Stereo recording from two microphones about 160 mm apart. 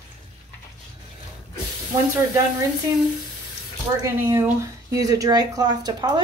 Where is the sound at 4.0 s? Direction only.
20° right (ahead or behind).